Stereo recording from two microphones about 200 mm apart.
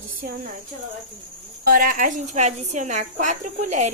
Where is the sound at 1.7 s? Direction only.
45° right (ahead or behind).